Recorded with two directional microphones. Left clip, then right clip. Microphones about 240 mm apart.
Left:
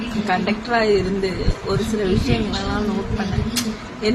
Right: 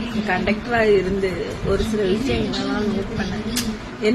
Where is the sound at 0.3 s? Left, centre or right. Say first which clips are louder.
Left 1 dB; centre.